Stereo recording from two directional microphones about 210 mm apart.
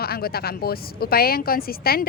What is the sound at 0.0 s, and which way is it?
A woman's voice, 45° left (ahead or behind).